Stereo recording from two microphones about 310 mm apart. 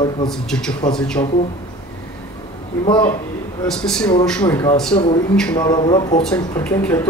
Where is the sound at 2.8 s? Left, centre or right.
Centre.